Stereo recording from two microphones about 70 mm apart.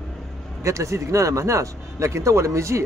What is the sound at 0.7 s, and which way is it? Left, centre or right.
Speech, right.